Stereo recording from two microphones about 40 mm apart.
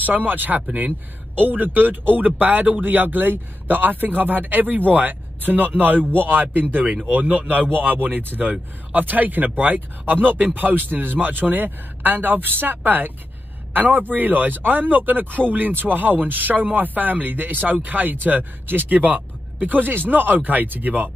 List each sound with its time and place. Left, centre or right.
0.0 s speech: right
18.9 s speech: right